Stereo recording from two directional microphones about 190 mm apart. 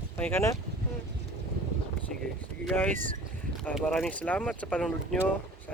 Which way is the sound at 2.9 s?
45° right (ahead or behind).